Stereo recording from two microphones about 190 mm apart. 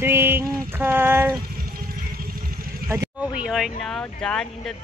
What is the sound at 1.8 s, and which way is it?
Vehicle, 50° right (ahead or behind).